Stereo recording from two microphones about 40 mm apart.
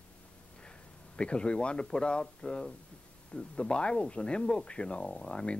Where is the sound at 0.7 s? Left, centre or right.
Left.